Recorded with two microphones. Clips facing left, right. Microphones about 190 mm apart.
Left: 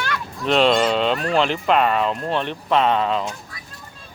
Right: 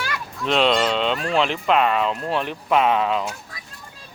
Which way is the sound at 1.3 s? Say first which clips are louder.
Even; centre (ahead or behind).